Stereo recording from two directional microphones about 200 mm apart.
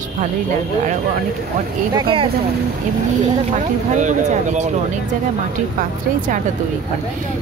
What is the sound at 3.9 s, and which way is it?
Speech, 35° right (ahead or behind).